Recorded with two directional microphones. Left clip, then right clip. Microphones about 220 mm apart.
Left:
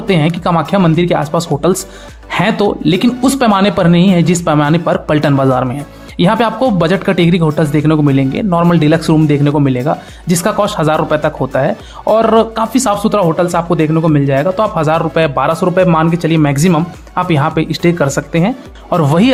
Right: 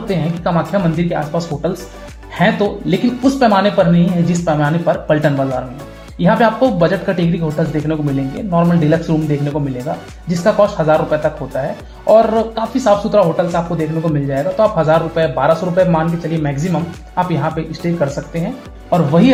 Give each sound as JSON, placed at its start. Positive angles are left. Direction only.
{"t": 0.1, "sound": "speech", "side_deg": 25}
{"t": 18.9, "sound": "speech", "side_deg": 40}